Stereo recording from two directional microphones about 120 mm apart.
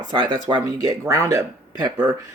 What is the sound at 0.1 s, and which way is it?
Speech, 40° right (ahead or behind).